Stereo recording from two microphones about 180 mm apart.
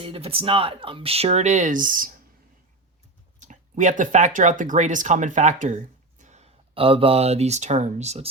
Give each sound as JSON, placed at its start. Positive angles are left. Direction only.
{"t": 0.0, "sound": "speech", "side_deg": -30}
{"t": 3.4, "sound": "speech", "side_deg": -45}